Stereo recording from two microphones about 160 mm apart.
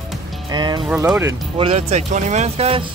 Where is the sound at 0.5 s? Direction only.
25° right (ahead or behind).